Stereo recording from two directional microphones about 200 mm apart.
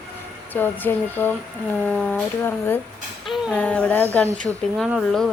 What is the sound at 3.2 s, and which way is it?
A woman's voice, centre (ahead or behind).